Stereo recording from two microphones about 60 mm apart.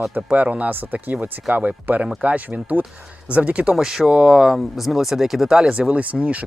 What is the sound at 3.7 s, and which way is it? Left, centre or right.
Speech, centre.